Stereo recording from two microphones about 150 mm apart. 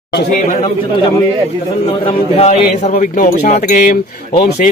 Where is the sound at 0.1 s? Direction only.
90° left.